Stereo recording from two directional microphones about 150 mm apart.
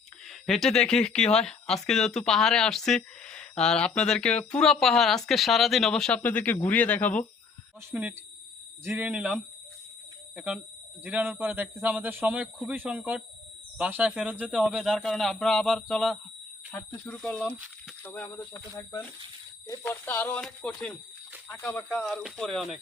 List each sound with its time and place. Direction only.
0.3 s speech: 5° left (ahead or behind)
7.9 s speech: 15° right (ahead or behind)